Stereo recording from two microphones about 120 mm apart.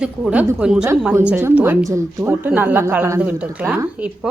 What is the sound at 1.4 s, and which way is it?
Speech, 15° right (ahead or behind).